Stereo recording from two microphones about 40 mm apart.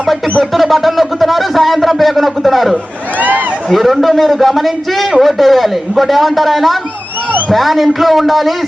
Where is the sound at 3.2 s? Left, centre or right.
Right.